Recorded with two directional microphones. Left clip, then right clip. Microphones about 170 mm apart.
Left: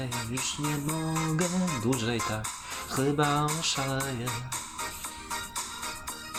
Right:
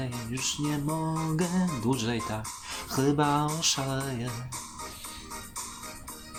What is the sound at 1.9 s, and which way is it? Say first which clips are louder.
Speech: left 1 dB; 5° left (ahead or behind).